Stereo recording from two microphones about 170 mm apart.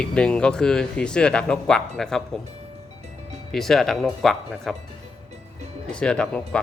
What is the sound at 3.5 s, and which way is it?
Speech, centre (ahead or behind).